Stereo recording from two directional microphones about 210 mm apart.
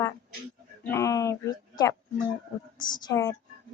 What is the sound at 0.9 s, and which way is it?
A woman's voice, 15° left (ahead or behind).